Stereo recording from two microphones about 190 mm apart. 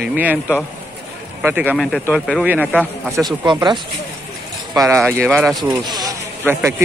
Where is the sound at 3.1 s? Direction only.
20° right (ahead or behind).